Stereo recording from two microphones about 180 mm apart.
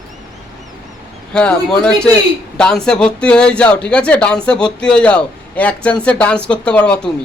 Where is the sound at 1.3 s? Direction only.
5° left (ahead or behind).